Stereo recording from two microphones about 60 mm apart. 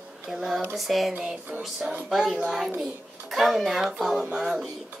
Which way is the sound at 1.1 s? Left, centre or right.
Centre.